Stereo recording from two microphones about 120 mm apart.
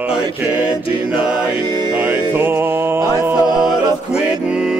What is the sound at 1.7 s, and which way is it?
Music, 35° right (ahead or behind).